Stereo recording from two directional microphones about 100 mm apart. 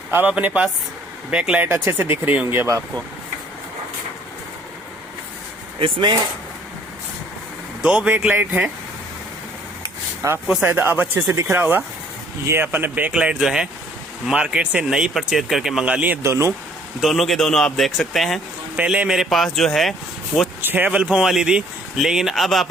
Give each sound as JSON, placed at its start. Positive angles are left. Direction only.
{"t": 0.1, "sound": "speech", "side_deg": -15}
{"t": 5.8, "sound": "speech", "side_deg": -50}
{"t": 7.8, "sound": "speech", "side_deg": -10}
{"t": 10.2, "sound": "speech", "side_deg": -35}
{"t": 10.6, "sound": "speech", "side_deg": -20}
{"t": 15.9, "sound": "speech", "side_deg": -15}
{"t": 16.2, "sound": "speech", "side_deg": -30}
{"t": 17.0, "sound": "speech", "side_deg": 0}
{"t": 18.8, "sound": "speech", "side_deg": -10}
{"t": 20.6, "sound": "speech", "side_deg": -20}